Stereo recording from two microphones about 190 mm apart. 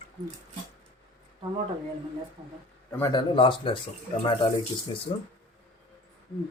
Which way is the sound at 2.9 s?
10° left (ahead or behind).